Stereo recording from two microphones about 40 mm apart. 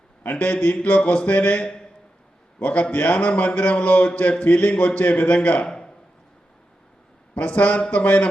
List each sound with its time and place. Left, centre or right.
0.3 s a man's voice: left
5.6 s a sound: left
7.3 s a man's voice: left